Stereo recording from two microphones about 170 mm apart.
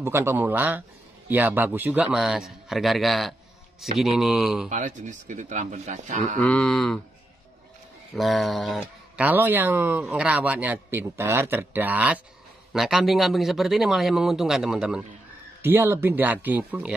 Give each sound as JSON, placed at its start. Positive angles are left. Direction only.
{"t": 0.0, "sound": "a man's voice", "side_deg": -15}
{"t": 4.6, "sound": "speech", "side_deg": -45}
{"t": 6.4, "sound": "speech", "side_deg": 5}
{"t": 8.1, "sound": "a sound", "side_deg": 0}
{"t": 9.2, "sound": "a man's voice", "side_deg": -10}